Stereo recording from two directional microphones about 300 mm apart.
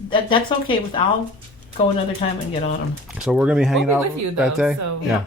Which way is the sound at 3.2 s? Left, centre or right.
Centre.